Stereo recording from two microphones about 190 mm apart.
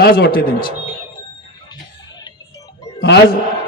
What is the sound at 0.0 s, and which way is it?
Speech, 50° left (ahead or behind).